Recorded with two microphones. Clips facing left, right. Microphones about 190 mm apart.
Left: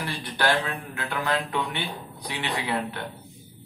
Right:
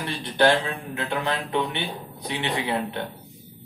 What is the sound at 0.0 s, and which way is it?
Speech, 25° right (ahead or behind).